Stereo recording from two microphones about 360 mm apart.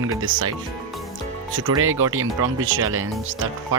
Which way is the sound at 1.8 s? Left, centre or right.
Right.